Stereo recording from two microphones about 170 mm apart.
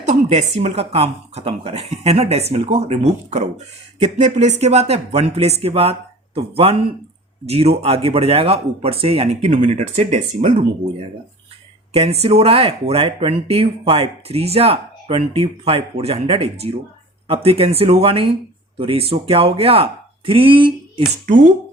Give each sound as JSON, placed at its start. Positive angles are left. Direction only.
{"t": 0.0, "sound": "speech", "side_deg": -40}
{"t": 12.2, "sound": "speech", "side_deg": -35}